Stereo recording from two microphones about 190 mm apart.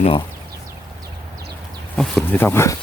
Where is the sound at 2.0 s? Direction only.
5° left (ahead or behind).